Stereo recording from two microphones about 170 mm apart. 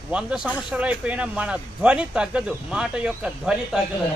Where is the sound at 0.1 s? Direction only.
5° right (ahead or behind).